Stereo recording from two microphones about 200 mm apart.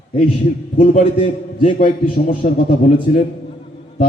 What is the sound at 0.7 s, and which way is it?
A man's voice, 35° left (ahead or behind).